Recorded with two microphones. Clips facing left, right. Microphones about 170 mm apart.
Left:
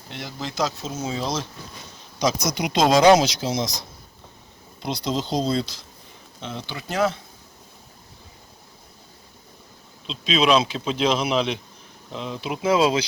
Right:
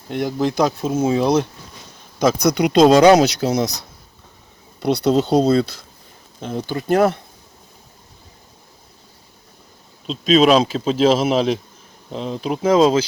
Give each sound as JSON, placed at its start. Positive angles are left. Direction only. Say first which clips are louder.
{"t": 0.1, "sound": "speech", "louder": "right 13 dB", "side_deg": -50}
{"t": 4.8, "sound": "speech", "louder": "right 10 dB", "side_deg": -65}
{"t": 6.4, "sound": "speech", "louder": "right 9 dB", "side_deg": -45}
{"t": 10.1, "sound": "speech", "louder": "right 6 dB", "side_deg": -45}